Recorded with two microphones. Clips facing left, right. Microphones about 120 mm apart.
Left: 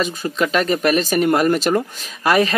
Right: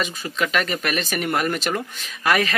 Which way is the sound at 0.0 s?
35° left (ahead or behind).